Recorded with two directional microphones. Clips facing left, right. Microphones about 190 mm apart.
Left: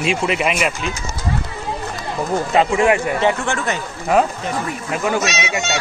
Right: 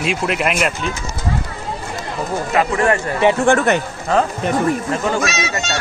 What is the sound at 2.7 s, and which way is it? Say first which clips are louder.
Speech: left 1 dB; 10° left (ahead or behind).